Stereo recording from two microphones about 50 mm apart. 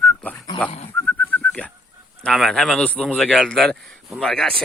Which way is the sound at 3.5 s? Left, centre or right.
Centre.